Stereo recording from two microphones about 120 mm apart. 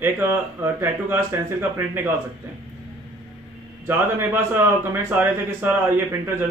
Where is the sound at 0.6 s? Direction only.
20° right (ahead or behind).